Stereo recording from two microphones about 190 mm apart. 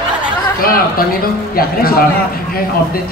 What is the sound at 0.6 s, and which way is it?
A man's voice, 50° left (ahead or behind).